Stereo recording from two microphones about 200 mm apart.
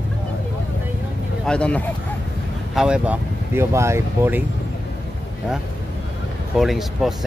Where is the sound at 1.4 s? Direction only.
5° left (ahead or behind); by 4.4 s 10° right (ahead or behind).